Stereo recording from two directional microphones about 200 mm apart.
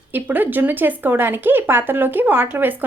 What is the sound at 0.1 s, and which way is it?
Speech, 10° right (ahead or behind).